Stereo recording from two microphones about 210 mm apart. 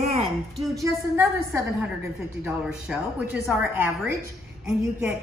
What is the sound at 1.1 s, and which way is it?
A woman's voice, 10° right (ahead or behind).